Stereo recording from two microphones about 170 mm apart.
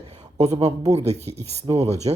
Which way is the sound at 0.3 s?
40° right (ahead or behind).